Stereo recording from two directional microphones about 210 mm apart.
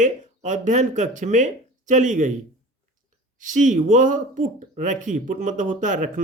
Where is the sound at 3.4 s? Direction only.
35° right (ahead or behind).